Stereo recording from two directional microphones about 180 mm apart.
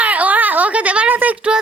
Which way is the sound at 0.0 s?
10° right (ahead or behind).